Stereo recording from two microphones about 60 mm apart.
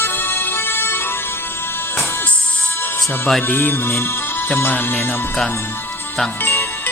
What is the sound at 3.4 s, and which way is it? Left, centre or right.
Speech, left.